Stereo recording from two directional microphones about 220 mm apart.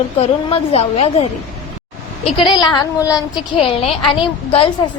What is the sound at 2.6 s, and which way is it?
Child singing, 20° left (ahead or behind).